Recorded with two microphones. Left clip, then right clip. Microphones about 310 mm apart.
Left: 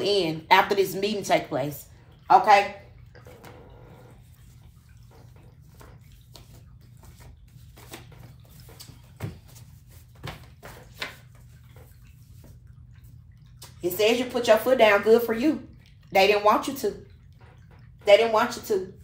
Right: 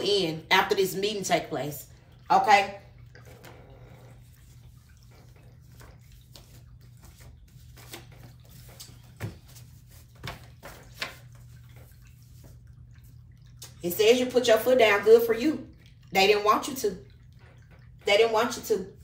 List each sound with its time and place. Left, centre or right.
0.0 s a woman's voice: left
13.6 s speech: centre
18.0 s speech: centre